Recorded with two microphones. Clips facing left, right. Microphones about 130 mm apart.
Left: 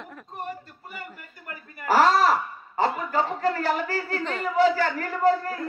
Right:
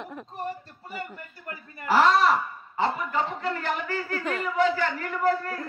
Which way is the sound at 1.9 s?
40° left (ahead or behind).